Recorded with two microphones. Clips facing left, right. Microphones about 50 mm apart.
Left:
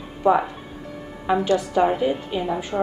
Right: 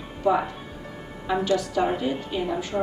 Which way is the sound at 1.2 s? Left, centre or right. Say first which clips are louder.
Left 3 dB; left.